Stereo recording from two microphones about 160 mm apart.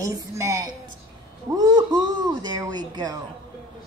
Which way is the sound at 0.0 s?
20° right (ahead or behind).